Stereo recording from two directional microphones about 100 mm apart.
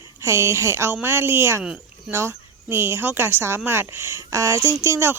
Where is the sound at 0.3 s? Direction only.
25° right (ahead or behind).